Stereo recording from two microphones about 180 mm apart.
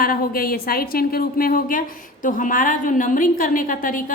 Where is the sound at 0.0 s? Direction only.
55° left (ahead or behind).